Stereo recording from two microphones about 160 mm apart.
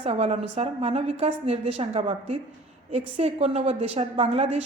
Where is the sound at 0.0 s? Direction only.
40° right (ahead or behind).